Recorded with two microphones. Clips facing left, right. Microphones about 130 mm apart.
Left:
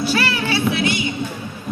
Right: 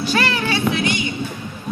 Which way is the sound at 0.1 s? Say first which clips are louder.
Even; 10° left (ahead or behind).